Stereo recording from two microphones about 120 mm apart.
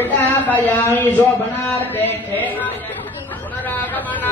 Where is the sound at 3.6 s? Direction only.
15° left (ahead or behind).